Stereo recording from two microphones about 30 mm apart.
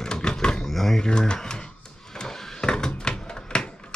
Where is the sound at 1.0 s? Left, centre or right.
Left.